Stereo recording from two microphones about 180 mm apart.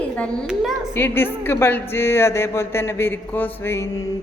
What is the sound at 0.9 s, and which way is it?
A woman's voice, 10° left (ahead or behind).